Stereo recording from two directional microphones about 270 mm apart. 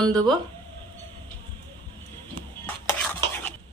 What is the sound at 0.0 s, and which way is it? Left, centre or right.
Speech, centre.